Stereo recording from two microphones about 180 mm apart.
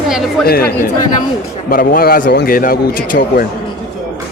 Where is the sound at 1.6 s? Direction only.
50° left (ahead or behind).